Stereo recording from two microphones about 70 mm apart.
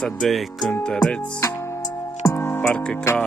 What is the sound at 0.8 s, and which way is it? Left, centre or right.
Speech, centre.